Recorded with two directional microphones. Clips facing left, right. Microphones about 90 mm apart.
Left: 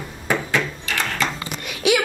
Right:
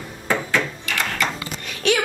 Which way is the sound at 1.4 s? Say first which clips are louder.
Even; 10° left (ahead or behind).